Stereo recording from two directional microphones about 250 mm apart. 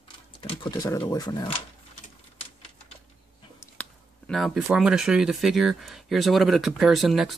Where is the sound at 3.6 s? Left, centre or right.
Centre.